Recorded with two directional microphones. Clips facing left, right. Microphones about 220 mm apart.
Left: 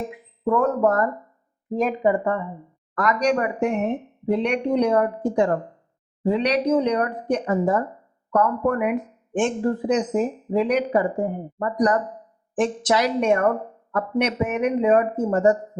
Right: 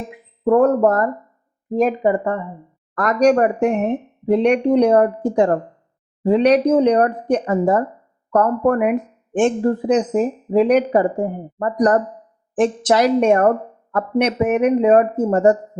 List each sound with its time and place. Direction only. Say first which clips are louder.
0.4 s speech: right 6 dB; 40° right (ahead or behind)
3.0 s speech: right 7 dB; 50° right (ahead or behind)